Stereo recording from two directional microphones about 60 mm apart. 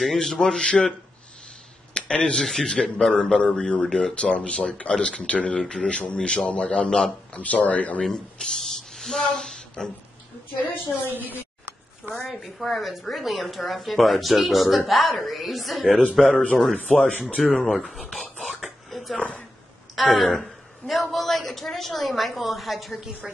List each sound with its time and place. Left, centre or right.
0.0 s a man's voice: centre
2.0 s a woman's voice: centre
7.3 s speech: left
8.0 s speech: centre
10.7 s a woman's voice: left
11.1 s a sound: right
12.3 s a woman's voice: centre
17.5 s a woman's voice: centre
18.1 s a sound: centre
19.1 s a woman's voice: left
20.2 s a woman's voice: centre